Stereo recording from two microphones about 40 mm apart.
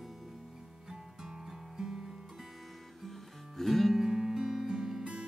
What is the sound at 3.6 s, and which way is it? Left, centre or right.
Music, centre.